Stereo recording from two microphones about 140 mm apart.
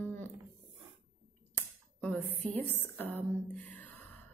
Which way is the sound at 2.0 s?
10° left (ahead or behind).